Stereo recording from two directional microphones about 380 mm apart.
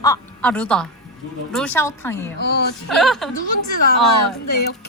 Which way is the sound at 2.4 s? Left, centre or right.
Left.